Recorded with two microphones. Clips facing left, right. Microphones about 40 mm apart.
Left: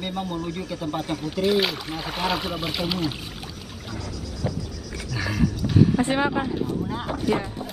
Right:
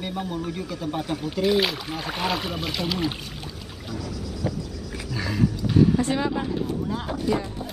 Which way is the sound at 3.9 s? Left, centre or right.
Centre.